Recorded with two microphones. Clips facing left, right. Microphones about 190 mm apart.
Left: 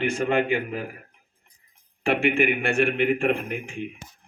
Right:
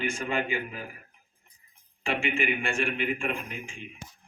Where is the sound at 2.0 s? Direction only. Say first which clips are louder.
Left 7 dB; 60° left (ahead or behind).